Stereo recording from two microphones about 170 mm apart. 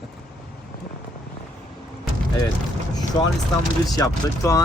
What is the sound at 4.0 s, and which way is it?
Speech, 20° left (ahead or behind).